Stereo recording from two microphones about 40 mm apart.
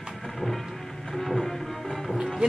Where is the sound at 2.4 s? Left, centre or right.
Right.